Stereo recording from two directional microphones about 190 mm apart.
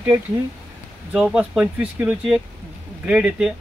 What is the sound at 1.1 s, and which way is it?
Speech, 5° right (ahead or behind).